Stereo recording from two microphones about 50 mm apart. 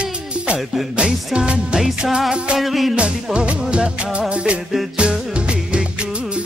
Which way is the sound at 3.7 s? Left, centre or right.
Right.